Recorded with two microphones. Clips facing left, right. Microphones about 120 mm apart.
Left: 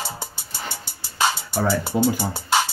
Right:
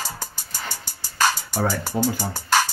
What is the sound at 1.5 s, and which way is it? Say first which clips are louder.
Speech: left 2 dB; 15° right (ahead or behind).